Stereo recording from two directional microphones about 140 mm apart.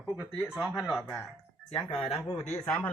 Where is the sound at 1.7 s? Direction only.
35° left (ahead or behind).